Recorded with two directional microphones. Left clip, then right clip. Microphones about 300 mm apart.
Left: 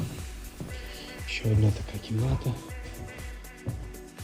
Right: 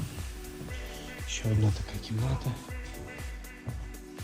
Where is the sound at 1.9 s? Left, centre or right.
Centre.